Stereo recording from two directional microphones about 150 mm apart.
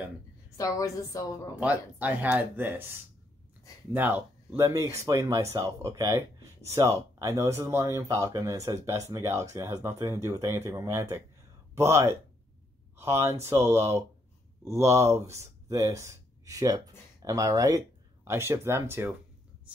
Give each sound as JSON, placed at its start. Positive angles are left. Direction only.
{"t": 0.6, "sound": "a woman's voice", "side_deg": 25}
{"t": 1.6, "sound": "speech", "side_deg": -10}
{"t": 3.9, "sound": "speech", "side_deg": -10}